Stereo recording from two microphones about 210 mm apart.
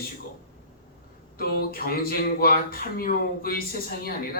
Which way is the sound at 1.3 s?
45° left (ahead or behind).